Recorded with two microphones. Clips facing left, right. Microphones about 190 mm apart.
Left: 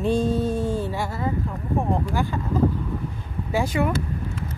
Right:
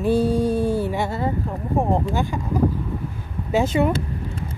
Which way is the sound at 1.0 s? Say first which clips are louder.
Right 3 dB; 30° right (ahead or behind).